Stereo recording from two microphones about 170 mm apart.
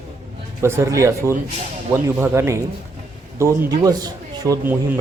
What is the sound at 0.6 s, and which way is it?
A man's voice, 15° right (ahead or behind).